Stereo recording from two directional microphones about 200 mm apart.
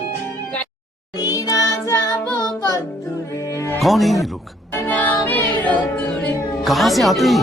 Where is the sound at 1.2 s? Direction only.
20° left (ahead or behind).